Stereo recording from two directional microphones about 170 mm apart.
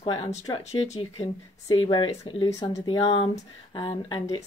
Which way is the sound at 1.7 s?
25° left (ahead or behind).